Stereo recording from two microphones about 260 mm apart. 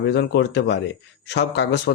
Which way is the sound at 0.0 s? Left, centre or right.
Left.